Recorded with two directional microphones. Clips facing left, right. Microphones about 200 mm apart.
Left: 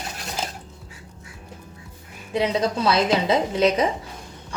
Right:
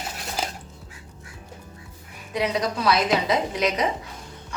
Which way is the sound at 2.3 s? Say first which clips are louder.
Left 3 dB; 25° left (ahead or behind).